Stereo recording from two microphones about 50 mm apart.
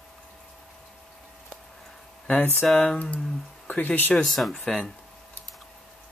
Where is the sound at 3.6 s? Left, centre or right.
Left.